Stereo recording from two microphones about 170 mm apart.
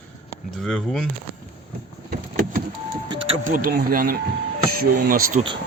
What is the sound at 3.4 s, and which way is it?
Speech, 55° right (ahead or behind).